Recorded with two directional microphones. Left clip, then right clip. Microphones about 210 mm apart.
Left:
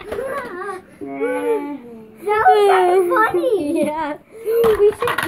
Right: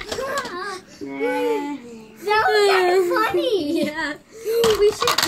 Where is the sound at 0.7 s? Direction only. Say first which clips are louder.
Left 3 dB; 15° right (ahead or behind).